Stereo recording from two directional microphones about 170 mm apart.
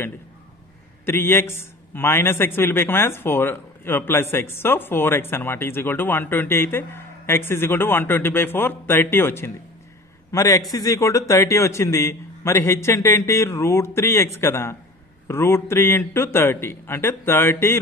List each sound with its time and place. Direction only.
1.0 s a man's voice: 15° left (ahead or behind)